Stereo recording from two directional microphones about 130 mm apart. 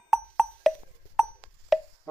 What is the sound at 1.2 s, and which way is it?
Percussion, centre (ahead or behind).